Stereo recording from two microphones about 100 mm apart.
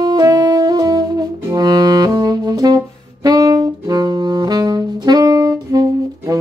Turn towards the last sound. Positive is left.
turn(degrees=-35)  # may be behind; listen again after turning